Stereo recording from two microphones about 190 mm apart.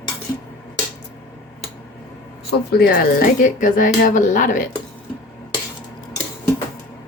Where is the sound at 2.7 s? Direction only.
55° left (ahead or behind).